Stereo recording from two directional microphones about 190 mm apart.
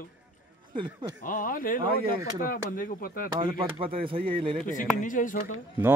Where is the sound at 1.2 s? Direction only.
45° left (ahead or behind).